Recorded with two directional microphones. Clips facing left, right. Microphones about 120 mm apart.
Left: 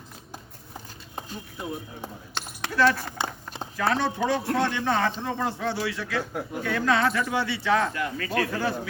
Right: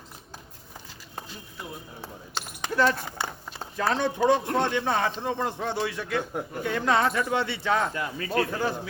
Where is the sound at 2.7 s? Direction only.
20° right (ahead or behind).